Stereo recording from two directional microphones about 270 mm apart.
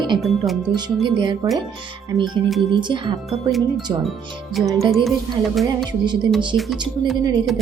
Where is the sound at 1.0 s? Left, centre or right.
Centre.